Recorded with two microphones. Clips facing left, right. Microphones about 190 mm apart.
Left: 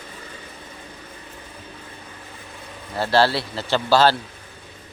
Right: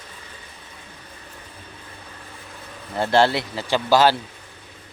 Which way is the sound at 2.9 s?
20° right (ahead or behind).